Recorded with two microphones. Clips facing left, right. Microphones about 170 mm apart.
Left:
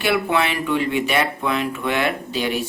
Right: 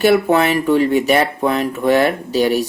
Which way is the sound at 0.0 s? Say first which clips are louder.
Right 7 dB; 40° right (ahead or behind).